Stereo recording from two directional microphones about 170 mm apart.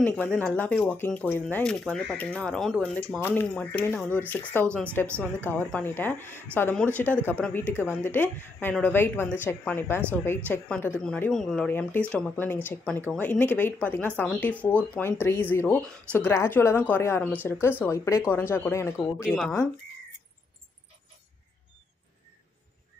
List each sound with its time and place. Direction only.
0.0 s speech: 10° left (ahead or behind)
3.2 s speech: 10° left (ahead or behind)
19.2 s speech: centre (ahead or behind)